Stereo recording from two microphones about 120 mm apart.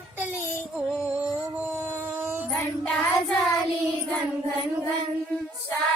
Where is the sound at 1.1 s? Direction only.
10° right (ahead or behind).